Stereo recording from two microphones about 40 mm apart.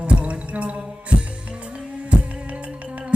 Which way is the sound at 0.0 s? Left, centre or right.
Right.